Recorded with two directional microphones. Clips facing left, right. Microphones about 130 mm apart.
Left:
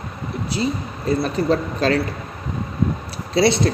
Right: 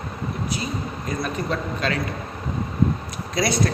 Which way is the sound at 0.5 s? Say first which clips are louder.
Left 5 dB; 30° left (ahead or behind).